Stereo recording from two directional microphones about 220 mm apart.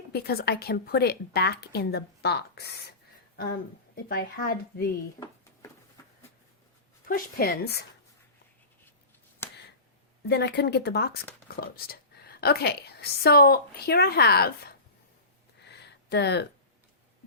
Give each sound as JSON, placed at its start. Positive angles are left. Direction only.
{"t": 0.1, "sound": "speech", "side_deg": 45}
{"t": 3.9, "sound": "speech", "side_deg": 45}
{"t": 7.1, "sound": "speech", "side_deg": 45}
{"t": 9.4, "sound": "a sound", "side_deg": 10}
{"t": 10.2, "sound": "speech", "side_deg": 50}
{"t": 15.6, "sound": "a sound", "side_deg": 50}